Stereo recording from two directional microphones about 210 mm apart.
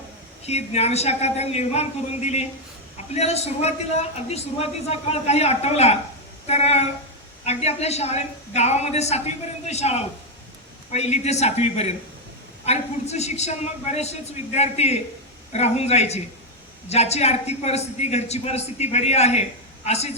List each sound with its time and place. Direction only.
0.4 s a man's voice: 30° left (ahead or behind)